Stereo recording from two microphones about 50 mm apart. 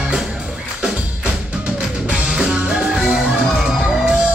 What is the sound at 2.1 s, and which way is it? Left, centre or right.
Music, centre.